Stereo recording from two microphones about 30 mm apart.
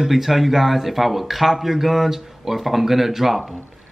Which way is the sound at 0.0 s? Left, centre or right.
Centre.